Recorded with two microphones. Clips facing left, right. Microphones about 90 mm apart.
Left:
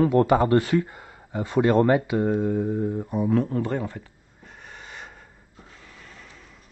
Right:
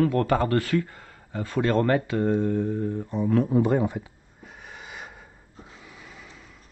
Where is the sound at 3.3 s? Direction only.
5° right (ahead or behind).